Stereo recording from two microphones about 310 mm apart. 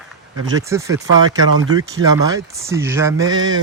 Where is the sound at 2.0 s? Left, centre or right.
Centre.